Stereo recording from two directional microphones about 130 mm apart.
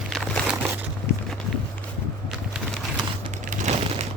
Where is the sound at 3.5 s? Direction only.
60° right (ahead or behind).